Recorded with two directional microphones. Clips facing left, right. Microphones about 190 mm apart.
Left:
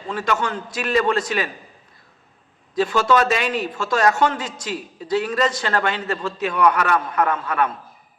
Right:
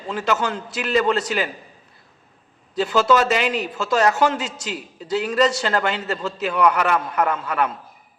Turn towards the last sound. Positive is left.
turn(degrees=-5)  # may be behind; listen again after turning